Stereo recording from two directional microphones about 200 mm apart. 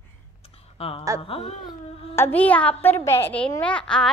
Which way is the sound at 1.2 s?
30° left (ahead or behind).